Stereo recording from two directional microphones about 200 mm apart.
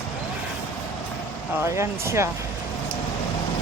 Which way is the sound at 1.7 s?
15° right (ahead or behind).